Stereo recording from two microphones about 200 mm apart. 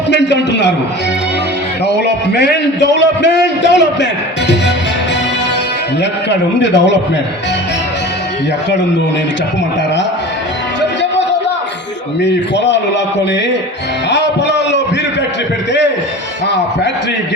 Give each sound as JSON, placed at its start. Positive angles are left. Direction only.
{"t": 0.1, "sound": "a man's voice", "side_deg": 60}
{"t": 1.8, "sound": "a man's voice", "side_deg": 55}
{"t": 6.0, "sound": "a man's voice", "side_deg": 60}
{"t": 12.2, "sound": "a man's voice", "side_deg": 60}
{"t": 14.1, "sound": "music", "side_deg": 60}